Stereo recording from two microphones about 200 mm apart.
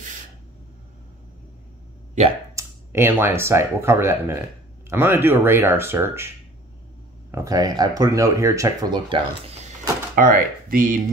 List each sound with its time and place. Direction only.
2.5 s speech: 10° right (ahead or behind); by 11.0 s 45° right (ahead or behind)